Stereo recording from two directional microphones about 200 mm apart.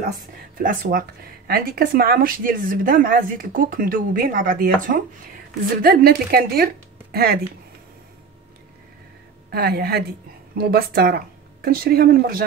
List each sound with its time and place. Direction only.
0.0 s speech: 45° right (ahead or behind)
9.5 s a woman's voice: 50° right (ahead or behind)